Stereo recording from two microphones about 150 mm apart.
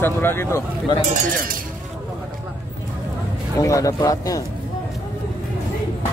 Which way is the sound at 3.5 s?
20° left (ahead or behind).